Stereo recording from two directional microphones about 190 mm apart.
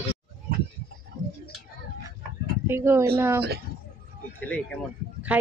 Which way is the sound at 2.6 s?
15° right (ahead or behind).